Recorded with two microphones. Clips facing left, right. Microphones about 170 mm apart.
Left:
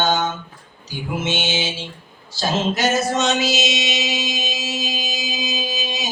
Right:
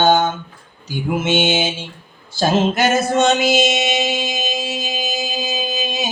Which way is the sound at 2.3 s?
55° right (ahead or behind).